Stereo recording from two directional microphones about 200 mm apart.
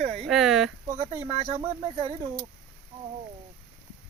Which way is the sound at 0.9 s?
35° right (ahead or behind).